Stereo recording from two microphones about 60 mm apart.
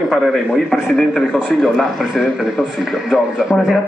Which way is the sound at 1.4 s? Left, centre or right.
Centre.